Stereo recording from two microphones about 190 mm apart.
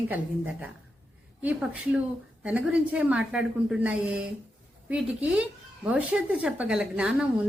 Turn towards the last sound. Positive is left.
turn(degrees=-5)  # may be behind; listen again after turning